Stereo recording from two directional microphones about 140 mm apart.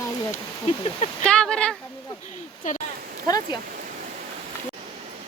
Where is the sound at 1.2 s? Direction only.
5° left (ahead or behind).